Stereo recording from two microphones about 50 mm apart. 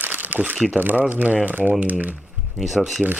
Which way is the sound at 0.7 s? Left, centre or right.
Right.